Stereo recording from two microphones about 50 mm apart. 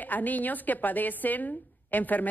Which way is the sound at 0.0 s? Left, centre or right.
Left.